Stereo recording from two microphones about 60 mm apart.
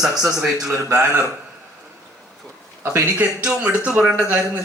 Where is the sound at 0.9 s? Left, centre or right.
Right.